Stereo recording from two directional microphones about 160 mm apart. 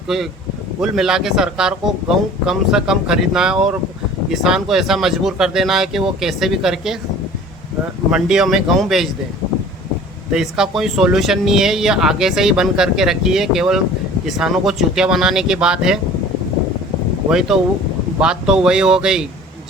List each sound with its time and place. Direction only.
0.1 s speech: 5° right (ahead or behind)
8.1 s speech: 5° right (ahead or behind)
10.3 s speech: 5° right (ahead or behind)
17.2 s speech: 5° right (ahead or behind)